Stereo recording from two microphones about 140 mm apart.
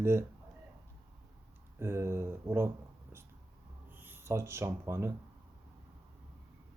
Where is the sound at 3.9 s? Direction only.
15° right (ahead or behind).